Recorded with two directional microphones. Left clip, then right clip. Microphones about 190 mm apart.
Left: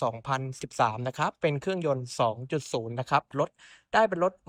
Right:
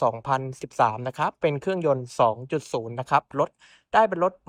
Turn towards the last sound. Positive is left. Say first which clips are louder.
# right 4 dB
turn(degrees=5)  # may be behind; listen again after turning